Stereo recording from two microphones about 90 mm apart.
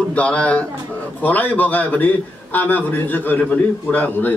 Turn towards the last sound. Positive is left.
turn(degrees=20)  # may be behind; listen again after turning